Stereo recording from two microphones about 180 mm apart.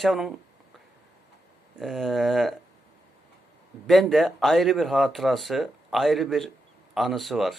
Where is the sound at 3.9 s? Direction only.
Centre (ahead or behind).